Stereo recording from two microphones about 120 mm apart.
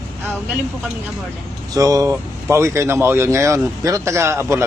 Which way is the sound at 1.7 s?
30° right (ahead or behind).